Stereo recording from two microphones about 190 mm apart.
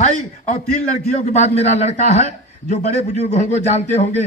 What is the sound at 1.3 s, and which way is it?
Speech, 35° left (ahead or behind).